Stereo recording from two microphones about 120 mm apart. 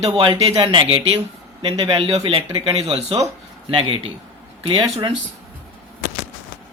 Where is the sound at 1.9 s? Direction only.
55° right (ahead or behind).